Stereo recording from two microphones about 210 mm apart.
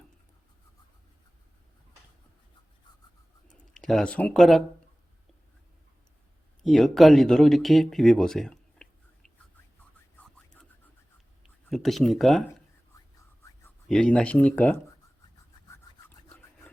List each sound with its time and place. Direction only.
3.8 s speech: centre (ahead or behind)
6.6 s speech: centre (ahead or behind)
11.4 s speech: centre (ahead or behind)
12.9 s whispering: 15° left (ahead or behind)
13.8 s speech: 5° left (ahead or behind)
15.7 s rub: 10° left (ahead or behind)